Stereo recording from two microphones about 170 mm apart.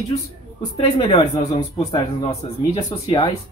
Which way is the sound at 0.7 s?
30° left (ahead or behind).